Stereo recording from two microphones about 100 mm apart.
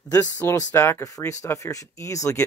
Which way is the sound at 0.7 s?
25° left (ahead or behind).